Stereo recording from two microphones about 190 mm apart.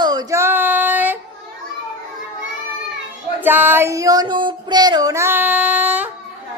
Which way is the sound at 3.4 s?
10° right (ahead or behind).